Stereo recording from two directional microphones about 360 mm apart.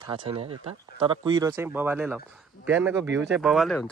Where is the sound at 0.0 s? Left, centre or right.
Centre.